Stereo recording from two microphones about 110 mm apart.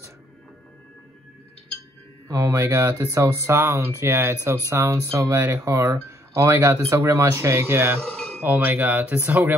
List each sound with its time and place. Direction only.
2.2 s speech: 25° right (ahead or behind)
8.0 s a sound: 5° left (ahead or behind)
8.4 s speech: 20° right (ahead or behind)